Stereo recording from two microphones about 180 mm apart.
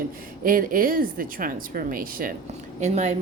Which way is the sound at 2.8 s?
40° right (ahead or behind).